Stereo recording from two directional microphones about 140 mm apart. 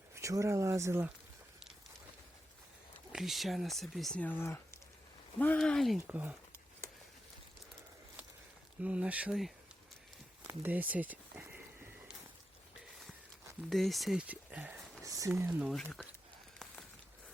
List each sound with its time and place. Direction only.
0.1 s speech: 20° right (ahead or behind)
3.1 s speech: centre (ahead or behind); by 4.8 s 15° left (ahead or behind)
5.5 s speech: 5° left (ahead or behind)
6.1 s speech: 15° right (ahead or behind)
8.8 s speech: 10° right (ahead or behind)
10.4 s a sound: 10° right (ahead or behind)
13.7 s speech: centre (ahead or behind)
15.0 s a sound: 25° right (ahead or behind)
15.4 s speech: 10° right (ahead or behind)
15.7 s speech: 5° left (ahead or behind)